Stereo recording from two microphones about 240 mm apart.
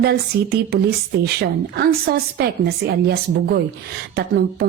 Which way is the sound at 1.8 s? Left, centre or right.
Right.